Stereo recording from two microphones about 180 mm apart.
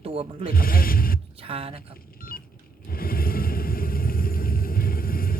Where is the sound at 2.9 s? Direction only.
55° left (ahead or behind).